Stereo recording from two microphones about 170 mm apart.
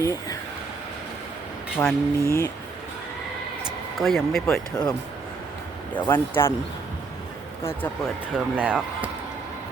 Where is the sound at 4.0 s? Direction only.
Centre (ahead or behind).